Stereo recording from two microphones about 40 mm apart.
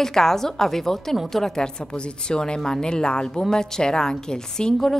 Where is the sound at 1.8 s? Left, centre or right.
Left.